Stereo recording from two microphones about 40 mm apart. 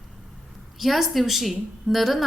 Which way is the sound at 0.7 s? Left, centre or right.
Centre.